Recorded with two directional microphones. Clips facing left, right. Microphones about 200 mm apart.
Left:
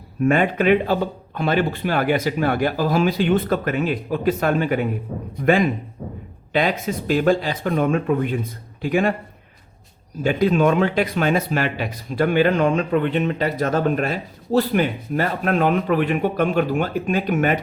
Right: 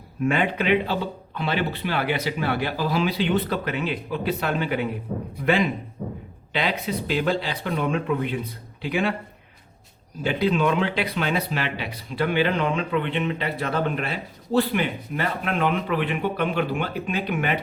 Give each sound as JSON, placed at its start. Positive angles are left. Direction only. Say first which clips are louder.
{"t": 0.3, "sound": "speech", "louder": "left 5 dB", "side_deg": 45}
{"t": 10.2, "sound": "speech", "louder": "left 4 dB", "side_deg": 45}